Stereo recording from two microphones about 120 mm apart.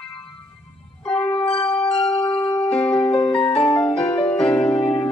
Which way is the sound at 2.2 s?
10° left (ahead or behind).